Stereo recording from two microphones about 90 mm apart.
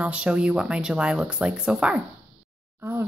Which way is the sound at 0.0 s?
15° right (ahead or behind).